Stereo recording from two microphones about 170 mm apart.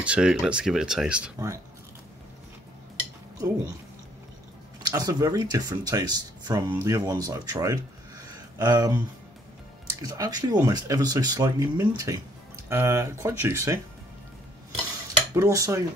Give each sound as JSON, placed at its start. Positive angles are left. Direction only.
{"t": 0.0, "sound": "speech", "side_deg": -5}
{"t": 3.3, "sound": "speech", "side_deg": -20}
{"t": 4.8, "sound": "speech", "side_deg": -20}
{"t": 10.0, "sound": "speech", "side_deg": -20}
{"t": 15.3, "sound": "speech", "side_deg": -20}